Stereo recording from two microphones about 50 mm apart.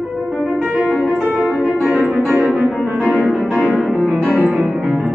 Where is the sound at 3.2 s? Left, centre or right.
Centre.